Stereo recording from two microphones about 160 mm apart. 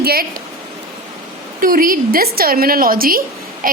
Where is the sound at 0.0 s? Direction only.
70° right (ahead or behind).